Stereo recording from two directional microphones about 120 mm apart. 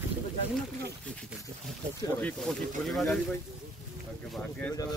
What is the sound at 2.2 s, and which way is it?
Speech, 10° left (ahead or behind).